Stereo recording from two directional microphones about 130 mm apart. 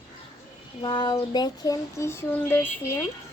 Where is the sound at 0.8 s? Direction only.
35° left (ahead or behind); by 2.7 s 15° left (ahead or behind).